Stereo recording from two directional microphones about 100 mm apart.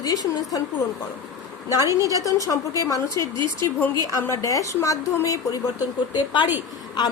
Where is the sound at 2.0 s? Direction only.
35° right (ahead or behind).